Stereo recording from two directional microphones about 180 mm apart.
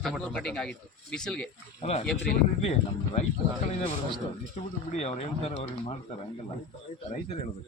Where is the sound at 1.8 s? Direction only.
35° left (ahead or behind).